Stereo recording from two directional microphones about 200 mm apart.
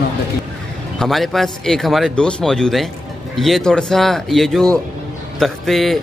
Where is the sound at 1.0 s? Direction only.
Centre (ahead or behind).